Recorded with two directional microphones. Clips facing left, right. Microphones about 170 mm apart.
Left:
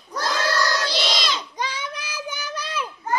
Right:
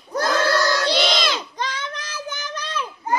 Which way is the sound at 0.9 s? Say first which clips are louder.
Right 5 dB; 50° right (ahead or behind).